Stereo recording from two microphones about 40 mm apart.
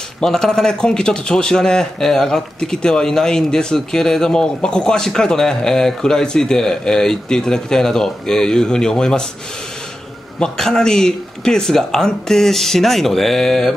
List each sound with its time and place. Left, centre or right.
0.2 s speech: centre
10.4 s speech: centre